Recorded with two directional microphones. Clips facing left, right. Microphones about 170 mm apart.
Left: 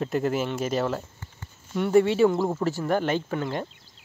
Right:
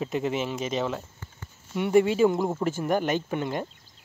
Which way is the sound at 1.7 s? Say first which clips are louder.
Left 1 dB; 10° right (ahead or behind).